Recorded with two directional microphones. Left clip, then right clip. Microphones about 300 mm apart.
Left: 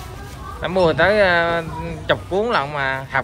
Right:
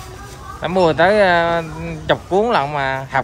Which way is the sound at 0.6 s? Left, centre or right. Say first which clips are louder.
Right 2 dB; centre.